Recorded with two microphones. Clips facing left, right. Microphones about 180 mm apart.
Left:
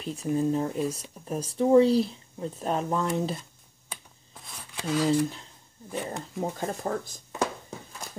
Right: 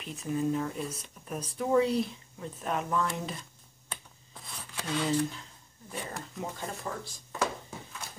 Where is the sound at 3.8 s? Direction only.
5° left (ahead or behind).